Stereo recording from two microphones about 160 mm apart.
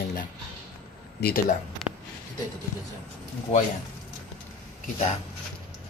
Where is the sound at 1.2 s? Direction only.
85° left.